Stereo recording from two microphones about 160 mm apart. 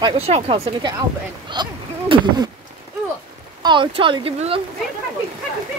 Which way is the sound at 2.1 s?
30° right (ahead or behind).